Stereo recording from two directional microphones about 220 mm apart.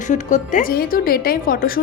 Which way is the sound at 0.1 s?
35° left (ahead or behind).